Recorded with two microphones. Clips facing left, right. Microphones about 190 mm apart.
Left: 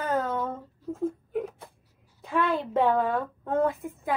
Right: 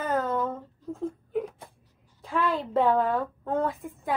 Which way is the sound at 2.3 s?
Centre (ahead or behind).